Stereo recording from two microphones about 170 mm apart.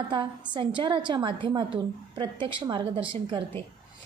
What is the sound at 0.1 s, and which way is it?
A woman's voice, 30° right (ahead or behind).